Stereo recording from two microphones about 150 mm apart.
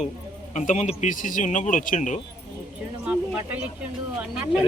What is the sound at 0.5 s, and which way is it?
Speech, 50° left (ahead or behind).